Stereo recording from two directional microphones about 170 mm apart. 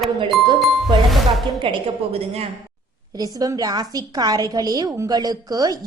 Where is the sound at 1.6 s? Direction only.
35° right (ahead or behind).